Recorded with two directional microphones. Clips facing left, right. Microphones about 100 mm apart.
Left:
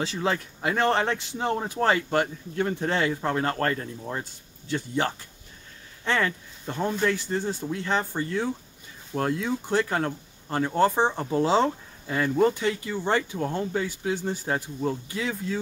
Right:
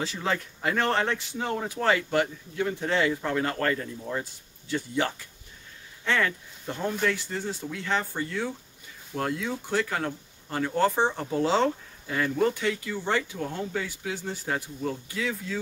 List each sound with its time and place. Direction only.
0.0 s speech: 20° left (ahead or behind)
6.0 s speech: 25° left (ahead or behind)
11.0 s speech: 20° left (ahead or behind)
13.1 s speech: 35° left (ahead or behind)